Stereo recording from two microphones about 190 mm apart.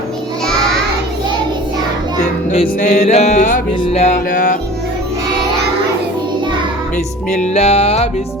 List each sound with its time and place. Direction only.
2.5 s music: 35° left (ahead or behind)
4.3 s music: 45° left (ahead or behind)
6.9 s music: 40° left (ahead or behind)